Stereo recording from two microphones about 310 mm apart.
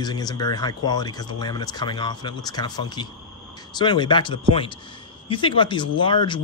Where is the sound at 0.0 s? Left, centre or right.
Centre.